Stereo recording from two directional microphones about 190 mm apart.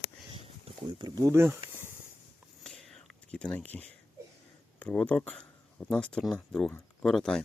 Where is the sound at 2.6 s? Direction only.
5° left (ahead or behind).